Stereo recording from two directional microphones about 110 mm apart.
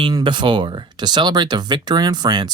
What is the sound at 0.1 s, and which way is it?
Speech, 45° right (ahead or behind).